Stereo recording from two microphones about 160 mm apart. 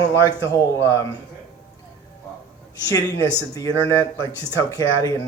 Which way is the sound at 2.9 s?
20° left (ahead or behind).